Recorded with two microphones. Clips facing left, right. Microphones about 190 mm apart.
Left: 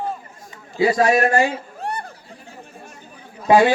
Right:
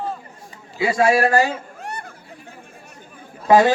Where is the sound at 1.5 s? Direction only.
35° left (ahead or behind).